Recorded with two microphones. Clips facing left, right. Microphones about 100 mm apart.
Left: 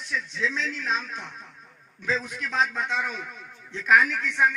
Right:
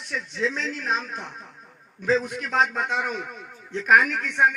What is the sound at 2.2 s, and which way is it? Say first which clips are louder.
A man's voice: right 3 dB; 55° right (ahead or behind).